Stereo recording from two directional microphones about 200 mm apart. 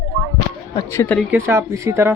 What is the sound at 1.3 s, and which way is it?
Speech, 10° right (ahead or behind).